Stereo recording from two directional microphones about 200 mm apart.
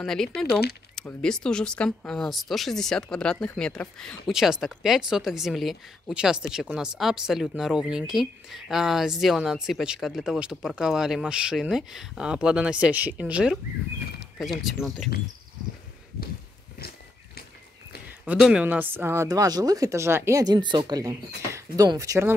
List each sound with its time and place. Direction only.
0.0 s speech: centre (ahead or behind)
18.2 s speech: 5° right (ahead or behind)